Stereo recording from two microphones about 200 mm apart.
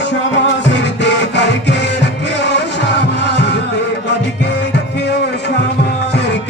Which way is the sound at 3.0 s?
60° left (ahead or behind).